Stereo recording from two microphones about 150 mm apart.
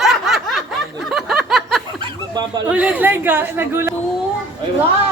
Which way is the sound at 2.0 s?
25° right (ahead or behind).